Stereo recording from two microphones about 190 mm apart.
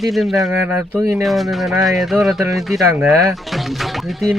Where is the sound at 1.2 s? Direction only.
Centre (ahead or behind).